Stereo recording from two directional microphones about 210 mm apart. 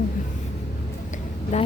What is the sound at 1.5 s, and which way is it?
Speech, 30° left (ahead or behind).